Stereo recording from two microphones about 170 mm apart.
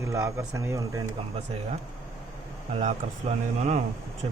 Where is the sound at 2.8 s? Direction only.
40° right (ahead or behind).